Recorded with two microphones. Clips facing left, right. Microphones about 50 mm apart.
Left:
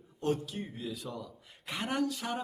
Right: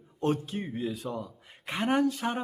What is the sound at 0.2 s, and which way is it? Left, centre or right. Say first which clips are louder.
Speech: right 4 dB; right.